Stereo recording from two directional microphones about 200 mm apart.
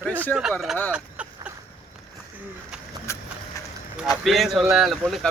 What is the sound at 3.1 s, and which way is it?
Vehicle, 15° left (ahead or behind).